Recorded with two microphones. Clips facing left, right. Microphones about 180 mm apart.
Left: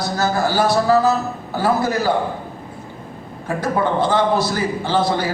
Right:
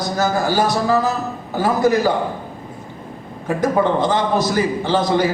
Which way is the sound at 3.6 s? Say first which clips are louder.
Right 2 dB; 15° right (ahead or behind).